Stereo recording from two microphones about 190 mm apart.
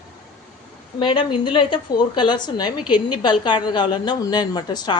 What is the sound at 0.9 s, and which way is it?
A woman's voice, 25° left (ahead or behind).